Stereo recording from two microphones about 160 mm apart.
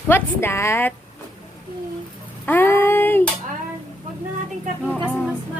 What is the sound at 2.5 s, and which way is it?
Speech, 15° left (ahead or behind).